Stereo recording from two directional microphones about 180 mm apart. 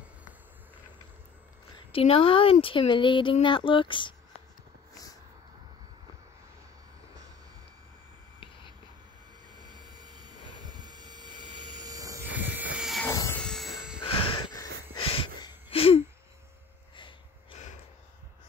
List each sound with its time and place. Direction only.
1.8 s speech: 30° left (ahead or behind)
9.5 s a sound: 25° right (ahead or behind)
10.5 s vehicle: 25° right (ahead or behind)
12.3 s vehicle: 90° right
12.5 s a sound: 5° right (ahead or behind)
13.0 s vehicle: 15° left (ahead or behind)
13.4 s train: centre (ahead or behind)
14.0 s a sound: 30° left (ahead or behind)
16.9 s snort: 25° left (ahead or behind)